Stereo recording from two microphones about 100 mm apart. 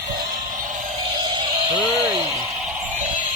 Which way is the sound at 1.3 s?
55° right (ahead or behind).